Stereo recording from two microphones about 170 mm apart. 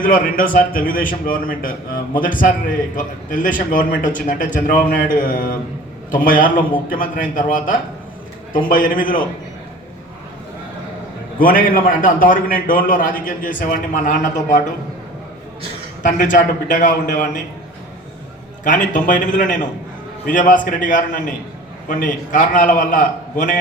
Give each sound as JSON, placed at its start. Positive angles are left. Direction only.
{"t": 0.0, "sound": "a man's voice", "side_deg": 55}
{"t": 11.3, "sound": "a man's voice", "side_deg": 55}
{"t": 16.0, "sound": "a man's voice", "side_deg": 50}
{"t": 18.6, "sound": "a man's voice", "side_deg": 50}